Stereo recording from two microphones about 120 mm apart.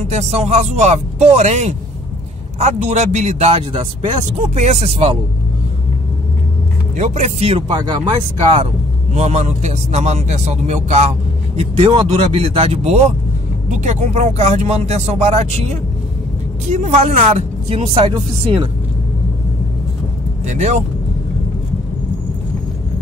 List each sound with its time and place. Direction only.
0.0 s a man's voice: 65° right (ahead or behind)
7.0 s speech: 70° right (ahead or behind); by 8.6 s 35° right (ahead or behind)
9.1 s a man's voice: 70° right (ahead or behind)
11.9 s speech: 50° right (ahead or behind)
13.7 s a man's voice: 80° right; by 18.1 s 60° right (ahead or behind)
18.1 s speech: 45° right (ahead or behind)
20.4 s a man's voice: 70° right (ahead or behind)